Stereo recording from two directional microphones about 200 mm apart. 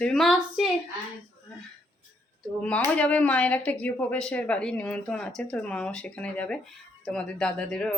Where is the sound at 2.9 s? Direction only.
5° left (ahead or behind).